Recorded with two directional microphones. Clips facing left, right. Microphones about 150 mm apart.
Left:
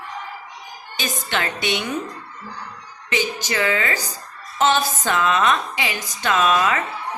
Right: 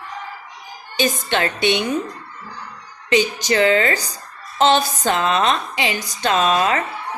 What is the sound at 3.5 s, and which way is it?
A woman's voice, 30° right (ahead or behind).